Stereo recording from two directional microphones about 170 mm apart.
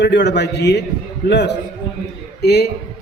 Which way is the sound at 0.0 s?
85° left.